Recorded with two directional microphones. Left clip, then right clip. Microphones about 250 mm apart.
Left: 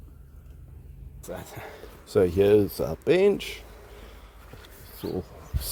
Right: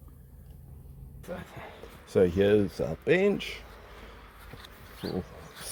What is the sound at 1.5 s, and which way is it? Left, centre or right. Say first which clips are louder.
Speech: left 4 dB; left.